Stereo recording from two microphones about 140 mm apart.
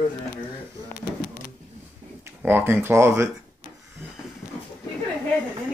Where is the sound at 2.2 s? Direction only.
15° right (ahead or behind).